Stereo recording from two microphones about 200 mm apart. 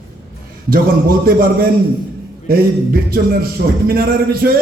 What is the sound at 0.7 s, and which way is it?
A man's voice, 45° right (ahead or behind).